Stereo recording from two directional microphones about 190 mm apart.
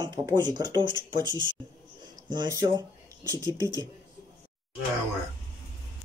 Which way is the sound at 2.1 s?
20° right (ahead or behind).